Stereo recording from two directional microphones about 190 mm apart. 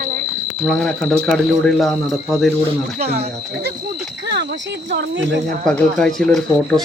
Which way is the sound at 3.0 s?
35° right (ahead or behind).